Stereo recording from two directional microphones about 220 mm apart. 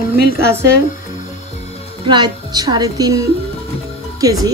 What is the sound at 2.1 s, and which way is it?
A woman's voice, 20° right (ahead or behind).